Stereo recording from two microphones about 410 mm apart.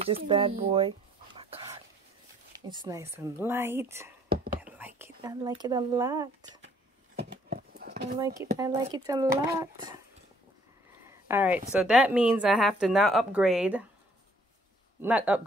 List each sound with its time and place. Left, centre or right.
0.0 s speech: centre
1.4 s a sound: centre
2.7 s speech: centre
7.2 s horse: right
8.2 s speech: centre
11.1 s a sound: centre
11.7 s speech: centre
15.0 s speech: centre